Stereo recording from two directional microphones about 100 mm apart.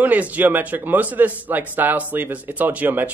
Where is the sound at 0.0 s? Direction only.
15° right (ahead or behind).